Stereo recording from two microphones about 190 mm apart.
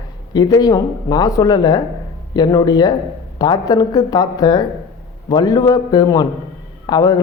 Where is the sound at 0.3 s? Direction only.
20° left (ahead or behind).